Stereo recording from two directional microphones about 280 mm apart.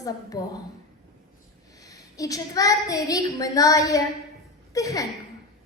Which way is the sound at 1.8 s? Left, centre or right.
Centre.